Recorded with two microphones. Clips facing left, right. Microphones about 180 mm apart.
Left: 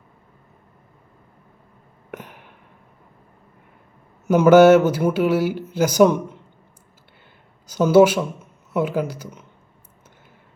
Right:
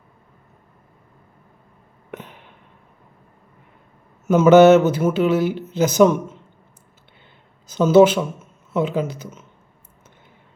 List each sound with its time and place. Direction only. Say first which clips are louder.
2.0 s a sound: even; 10° left (ahead or behind)
4.3 s speech: right 1 dB; 10° left (ahead or behind)
7.7 s speech: right 1 dB; 10° left (ahead or behind)